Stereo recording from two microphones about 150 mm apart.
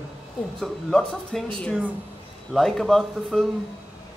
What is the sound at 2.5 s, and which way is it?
Speech, centre (ahead or behind).